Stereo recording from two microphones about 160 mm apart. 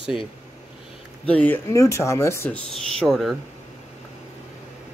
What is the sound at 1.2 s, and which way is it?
Speech, 10° left (ahead or behind).